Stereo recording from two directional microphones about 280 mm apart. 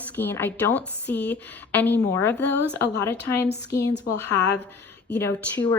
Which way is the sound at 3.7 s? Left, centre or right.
Left.